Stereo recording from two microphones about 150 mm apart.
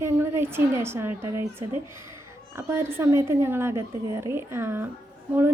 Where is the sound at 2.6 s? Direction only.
15° right (ahead or behind).